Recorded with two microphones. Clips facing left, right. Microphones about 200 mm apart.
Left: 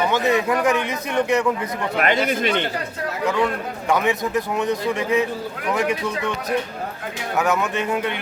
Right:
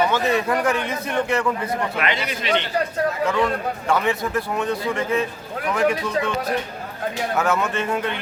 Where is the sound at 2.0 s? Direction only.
50° left (ahead or behind).